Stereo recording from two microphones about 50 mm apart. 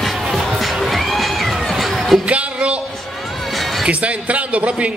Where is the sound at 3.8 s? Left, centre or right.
Right.